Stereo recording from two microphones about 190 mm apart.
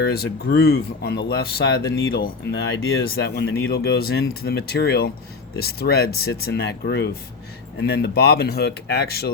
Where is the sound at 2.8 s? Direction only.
75° left (ahead or behind).